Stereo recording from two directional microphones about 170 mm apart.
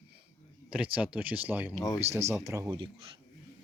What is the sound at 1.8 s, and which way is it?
Speech, 20° left (ahead or behind).